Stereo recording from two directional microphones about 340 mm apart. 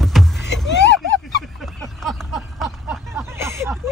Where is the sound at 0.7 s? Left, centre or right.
Left.